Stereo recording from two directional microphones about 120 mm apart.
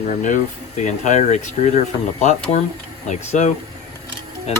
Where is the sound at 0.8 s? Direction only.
90° left.